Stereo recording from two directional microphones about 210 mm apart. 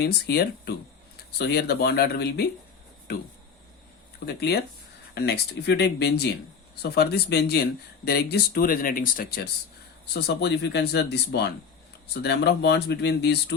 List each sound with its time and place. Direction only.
0.0 s speech: 50° left (ahead or behind)
4.3 s speech: 50° left (ahead or behind)